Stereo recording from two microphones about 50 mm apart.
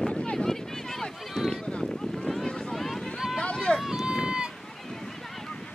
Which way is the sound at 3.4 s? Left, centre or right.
Left.